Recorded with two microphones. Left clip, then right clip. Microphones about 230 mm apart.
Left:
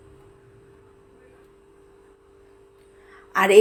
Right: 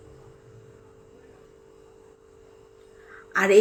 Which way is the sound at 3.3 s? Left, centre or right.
Centre.